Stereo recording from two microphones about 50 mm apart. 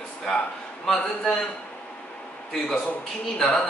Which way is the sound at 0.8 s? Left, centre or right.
Centre.